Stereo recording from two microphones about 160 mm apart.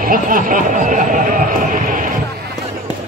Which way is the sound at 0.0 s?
60° right (ahead or behind).